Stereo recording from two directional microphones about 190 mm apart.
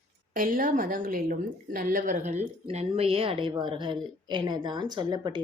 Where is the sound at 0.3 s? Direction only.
45° right (ahead or behind).